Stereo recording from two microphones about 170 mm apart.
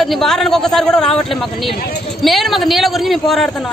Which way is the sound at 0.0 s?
Centre (ahead or behind).